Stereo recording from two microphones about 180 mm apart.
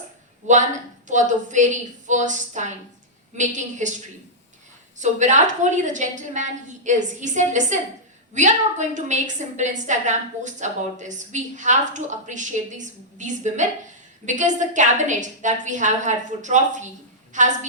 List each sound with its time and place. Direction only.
0.4 s a woman's voice: 45° right (ahead or behind)
4.9 s a woman's voice: 40° right (ahead or behind)